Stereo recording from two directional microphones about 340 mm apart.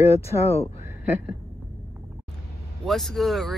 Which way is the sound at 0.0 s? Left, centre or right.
Centre.